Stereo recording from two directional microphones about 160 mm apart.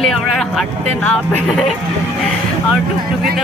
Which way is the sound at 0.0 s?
Centre (ahead or behind).